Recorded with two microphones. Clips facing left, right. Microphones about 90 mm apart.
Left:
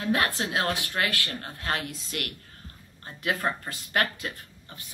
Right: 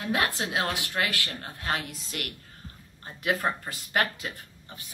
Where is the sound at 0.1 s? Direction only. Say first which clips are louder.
Left 1 dB; 15° right (ahead or behind).